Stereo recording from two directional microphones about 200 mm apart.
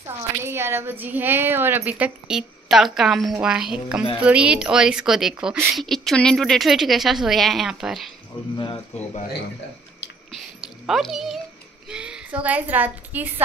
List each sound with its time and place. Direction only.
0.5 s a woman's voice: 10° right (ahead or behind)
8.3 s speech: 25° left (ahead or behind)
10.3 s a sound: centre (ahead or behind)
11.9 s a woman's voice: 5° right (ahead or behind)